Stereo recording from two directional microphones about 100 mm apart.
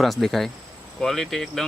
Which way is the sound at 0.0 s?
Centre (ahead or behind).